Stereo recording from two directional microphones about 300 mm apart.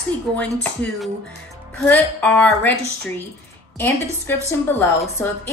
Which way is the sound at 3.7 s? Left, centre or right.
Centre.